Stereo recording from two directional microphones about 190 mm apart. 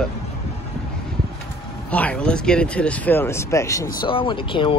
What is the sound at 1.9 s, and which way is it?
Speech, 5° left (ahead or behind).